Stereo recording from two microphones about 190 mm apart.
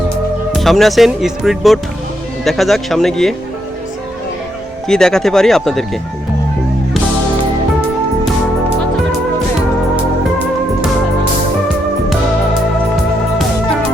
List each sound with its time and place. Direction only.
0.5 s speech: centre (ahead or behind)
4.9 s speech: 5° left (ahead or behind)